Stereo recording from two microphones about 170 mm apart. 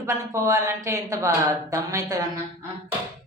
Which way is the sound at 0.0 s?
20° right (ahead or behind).